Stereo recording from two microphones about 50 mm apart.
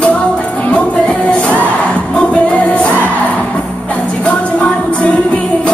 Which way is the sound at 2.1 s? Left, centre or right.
Left.